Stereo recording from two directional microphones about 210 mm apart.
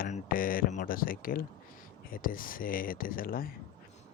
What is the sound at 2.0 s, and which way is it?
Speech, 40° left (ahead or behind).